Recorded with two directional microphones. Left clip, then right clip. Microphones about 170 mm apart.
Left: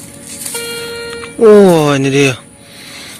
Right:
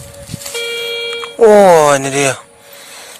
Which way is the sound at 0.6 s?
35° right (ahead or behind).